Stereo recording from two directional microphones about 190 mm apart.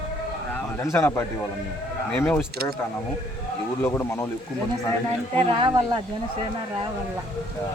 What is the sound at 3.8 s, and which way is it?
Speech, 10° left (ahead or behind).